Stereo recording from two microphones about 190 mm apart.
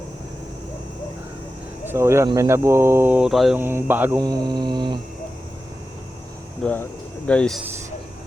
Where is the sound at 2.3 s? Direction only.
15° right (ahead or behind).